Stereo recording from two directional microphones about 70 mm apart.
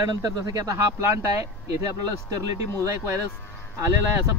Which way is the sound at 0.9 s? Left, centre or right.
Right.